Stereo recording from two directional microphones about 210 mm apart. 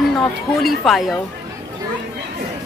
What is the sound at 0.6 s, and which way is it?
Speech, centre (ahead or behind).